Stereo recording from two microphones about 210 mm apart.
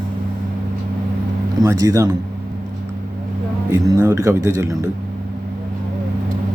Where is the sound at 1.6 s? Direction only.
15° right (ahead or behind).